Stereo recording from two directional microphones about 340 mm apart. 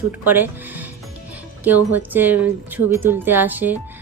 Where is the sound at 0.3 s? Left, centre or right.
Centre.